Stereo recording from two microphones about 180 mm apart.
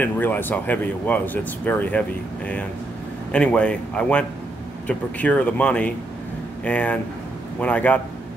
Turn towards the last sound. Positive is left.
turn(degrees=10)  # may be behind; listen again after turning